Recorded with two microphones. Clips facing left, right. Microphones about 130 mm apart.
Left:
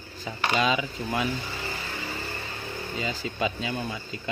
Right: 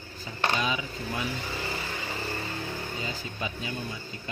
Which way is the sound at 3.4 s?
90° left.